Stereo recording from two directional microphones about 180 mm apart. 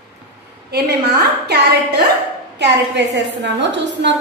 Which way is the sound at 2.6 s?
75° right (ahead or behind).